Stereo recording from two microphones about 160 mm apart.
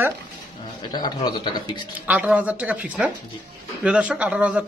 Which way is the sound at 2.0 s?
10° right (ahead or behind).